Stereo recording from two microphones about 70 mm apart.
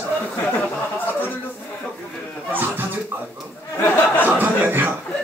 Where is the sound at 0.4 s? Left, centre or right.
Left.